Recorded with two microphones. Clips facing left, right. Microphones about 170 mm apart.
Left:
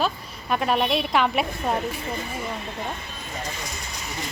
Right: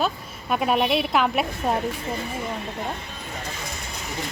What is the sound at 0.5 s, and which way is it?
A woman's voice, 5° right (ahead or behind).